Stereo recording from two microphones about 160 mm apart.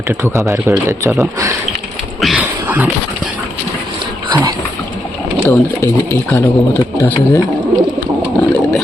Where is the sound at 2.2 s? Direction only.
Centre (ahead or behind).